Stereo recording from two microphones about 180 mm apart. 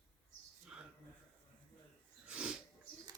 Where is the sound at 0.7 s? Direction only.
5° right (ahead or behind).